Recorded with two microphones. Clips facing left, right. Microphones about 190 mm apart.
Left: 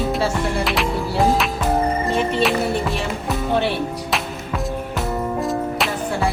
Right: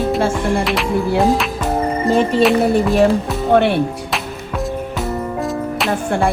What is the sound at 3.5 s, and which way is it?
Speech, 60° right (ahead or behind).